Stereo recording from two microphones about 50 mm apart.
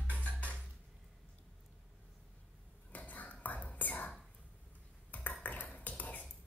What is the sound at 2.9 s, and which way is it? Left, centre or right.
Whispering, left.